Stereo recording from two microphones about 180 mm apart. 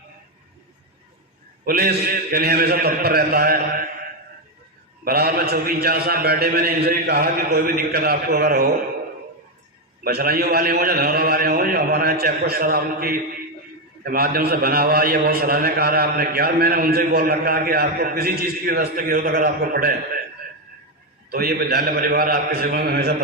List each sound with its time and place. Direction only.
1.6 s a man's voice: 55° right (ahead or behind)
5.0 s a man's voice: 55° right (ahead or behind)
10.0 s a man's voice: 60° right (ahead or behind)
21.2 s a man's voice: 55° right (ahead or behind)